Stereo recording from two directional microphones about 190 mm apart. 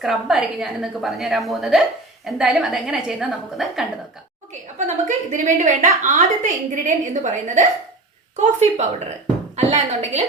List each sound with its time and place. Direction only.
0.0 s a woman's voice: centre (ahead or behind)
4.9 s a woman's voice: 40° right (ahead or behind)